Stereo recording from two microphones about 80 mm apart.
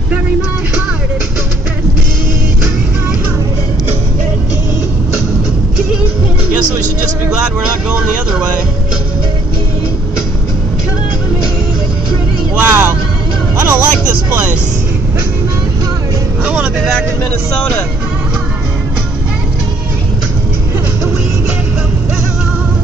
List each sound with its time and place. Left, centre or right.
12.5 s vehicle: right
13.7 s music: centre
16.4 s vehicle: centre